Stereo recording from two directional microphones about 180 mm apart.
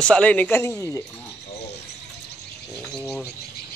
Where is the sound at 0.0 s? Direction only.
5° left (ahead or behind).